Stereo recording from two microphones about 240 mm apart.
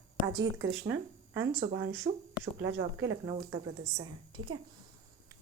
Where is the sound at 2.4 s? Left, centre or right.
Right.